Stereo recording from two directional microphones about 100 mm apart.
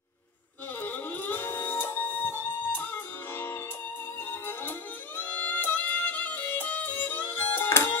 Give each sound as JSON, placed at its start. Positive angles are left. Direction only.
{"t": 0.8, "sound": "music", "side_deg": 20}